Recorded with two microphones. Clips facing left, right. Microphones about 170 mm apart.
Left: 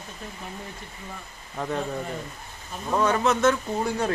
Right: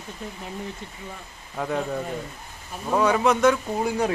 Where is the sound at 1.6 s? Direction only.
5° right (ahead or behind).